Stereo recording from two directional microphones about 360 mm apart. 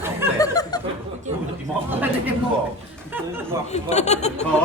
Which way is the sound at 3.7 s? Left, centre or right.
Centre.